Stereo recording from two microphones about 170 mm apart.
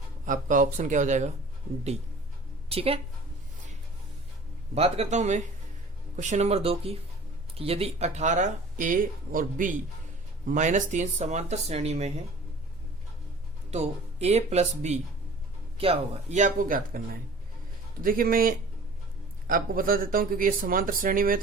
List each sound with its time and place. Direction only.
0.3 s speech: 50° right (ahead or behind)
2.6 s a woman's voice: 35° right (ahead or behind)
4.7 s speech: 40° right (ahead or behind)
13.7 s speech: 40° right (ahead or behind); by 21.3 s 55° right (ahead or behind)